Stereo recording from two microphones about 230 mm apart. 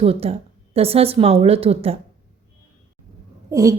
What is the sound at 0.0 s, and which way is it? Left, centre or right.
A woman's voice, right.